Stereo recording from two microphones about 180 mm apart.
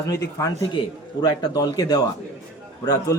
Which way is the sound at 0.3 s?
20° left (ahead or behind).